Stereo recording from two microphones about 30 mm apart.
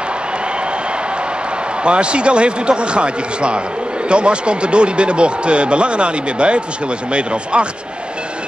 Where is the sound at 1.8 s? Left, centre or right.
Right.